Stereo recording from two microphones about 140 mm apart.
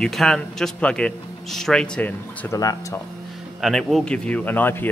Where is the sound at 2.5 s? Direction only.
25° left (ahead or behind).